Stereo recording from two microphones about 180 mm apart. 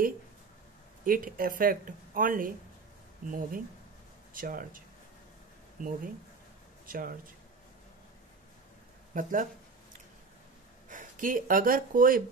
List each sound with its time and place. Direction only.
1.0 s speech: 50° right (ahead or behind)
9.1 s speech: 50° right (ahead or behind)
10.9 s speech: 45° right (ahead or behind)